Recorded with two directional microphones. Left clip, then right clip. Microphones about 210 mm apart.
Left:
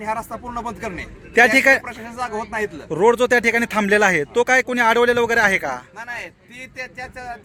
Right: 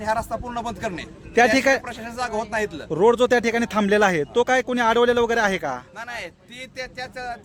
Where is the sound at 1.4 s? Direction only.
Centre (ahead or behind).